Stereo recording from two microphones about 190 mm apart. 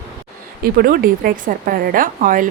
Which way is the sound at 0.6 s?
50° right (ahead or behind).